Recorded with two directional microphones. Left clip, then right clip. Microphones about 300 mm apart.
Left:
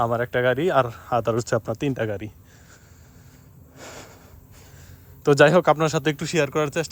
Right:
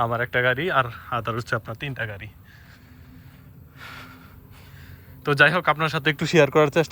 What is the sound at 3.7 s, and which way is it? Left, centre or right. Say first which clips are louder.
Snort: right 1 dB; left.